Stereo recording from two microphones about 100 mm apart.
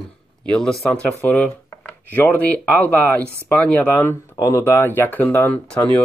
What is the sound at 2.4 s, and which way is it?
Speech, 15° left (ahead or behind).